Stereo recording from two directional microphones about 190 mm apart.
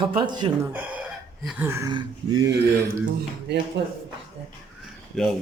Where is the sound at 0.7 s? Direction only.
10° right (ahead or behind).